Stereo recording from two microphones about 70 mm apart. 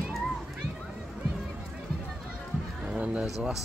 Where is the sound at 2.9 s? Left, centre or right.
Centre.